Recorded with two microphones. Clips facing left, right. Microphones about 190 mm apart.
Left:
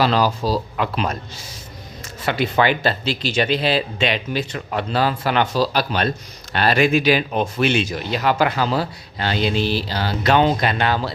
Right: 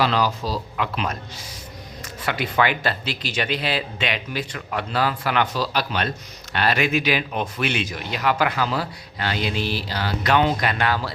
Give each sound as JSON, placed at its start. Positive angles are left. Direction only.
{"t": 0.0, "sound": "speech", "side_deg": 35}
{"t": 2.2, "sound": "speech", "side_deg": 30}